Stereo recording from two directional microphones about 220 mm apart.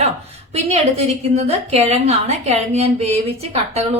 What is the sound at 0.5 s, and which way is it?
A woman's voice, 30° right (ahead or behind).